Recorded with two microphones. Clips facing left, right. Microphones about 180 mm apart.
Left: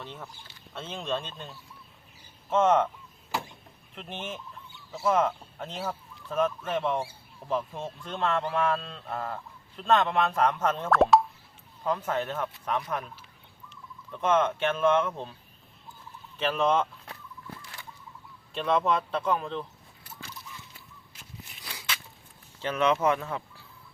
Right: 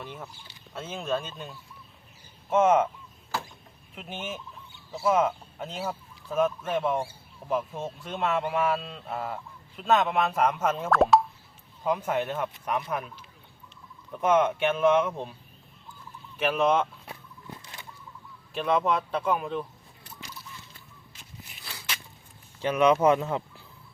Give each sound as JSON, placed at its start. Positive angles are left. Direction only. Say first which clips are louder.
{"t": 0.0, "sound": "speech", "louder": "right 2 dB", "side_deg": -10}
{"t": 3.9, "sound": "speech", "louder": "right 1 dB", "side_deg": -5}
{"t": 14.1, "sound": "speech", "louder": "right 2 dB", "side_deg": -10}
{"t": 16.4, "sound": "speech", "louder": "right 2 dB", "side_deg": -10}
{"t": 17.6, "sound": "bird flight", "louder": "even", "side_deg": -20}
{"t": 18.5, "sound": "speech", "louder": "right 1 dB", "side_deg": -5}
{"t": 21.1, "sound": "walk", "louder": "left 1 dB", "side_deg": 5}
{"t": 22.6, "sound": "speech", "louder": "right 4 dB", "side_deg": -15}